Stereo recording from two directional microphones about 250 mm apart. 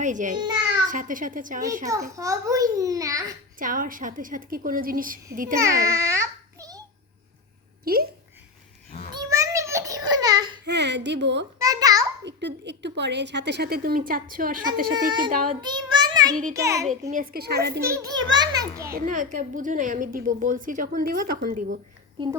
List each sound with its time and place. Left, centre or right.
0.0 s a woman's voice: right
1.9 s a child's voice: centre
3.6 s a woman's voice: right
5.5 s babbling: centre
7.9 s a woman's voice: right
9.1 s a sound: centre
10.7 s a woman's voice: right
11.6 s a sound: centre
12.2 s a woman's voice: right
15.6 s a child's voice: centre
17.1 s a woman's voice: right
17.8 s a child's voice: centre
18.9 s a woman's voice: right